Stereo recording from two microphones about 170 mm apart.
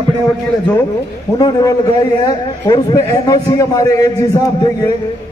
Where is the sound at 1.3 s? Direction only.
20° left (ahead or behind).